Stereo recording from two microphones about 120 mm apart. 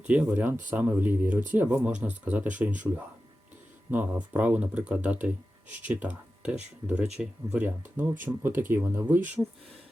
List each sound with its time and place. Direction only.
0.1 s speech: 15° right (ahead or behind)
3.9 s speech: 15° right (ahead or behind)